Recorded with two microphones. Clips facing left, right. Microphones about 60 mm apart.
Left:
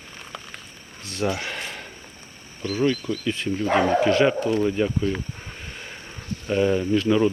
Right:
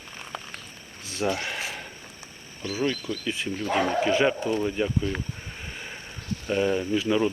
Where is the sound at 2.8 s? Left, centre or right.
Centre.